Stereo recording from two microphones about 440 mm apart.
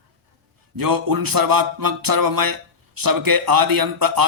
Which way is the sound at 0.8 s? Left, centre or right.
Right.